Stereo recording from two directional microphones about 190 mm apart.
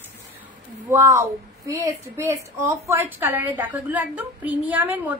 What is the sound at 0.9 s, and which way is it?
A woman's voice, 15° right (ahead or behind).